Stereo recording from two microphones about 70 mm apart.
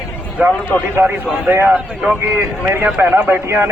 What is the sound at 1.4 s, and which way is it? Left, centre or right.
Speech, right.